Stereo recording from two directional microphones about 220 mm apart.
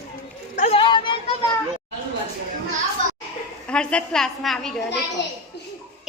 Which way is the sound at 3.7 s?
5° left (ahead or behind).